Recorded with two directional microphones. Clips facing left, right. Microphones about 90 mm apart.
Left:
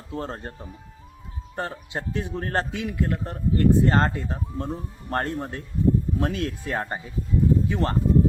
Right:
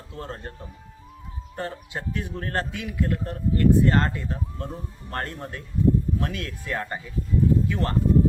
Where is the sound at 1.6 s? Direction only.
25° left (ahead or behind).